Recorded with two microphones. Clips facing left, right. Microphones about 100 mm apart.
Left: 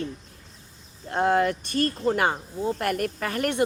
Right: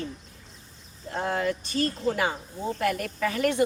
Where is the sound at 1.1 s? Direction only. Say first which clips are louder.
Left 6 dB; 60° left (ahead or behind).